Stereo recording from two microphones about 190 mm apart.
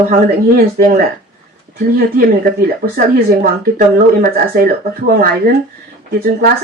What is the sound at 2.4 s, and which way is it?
Speech, 50° right (ahead or behind).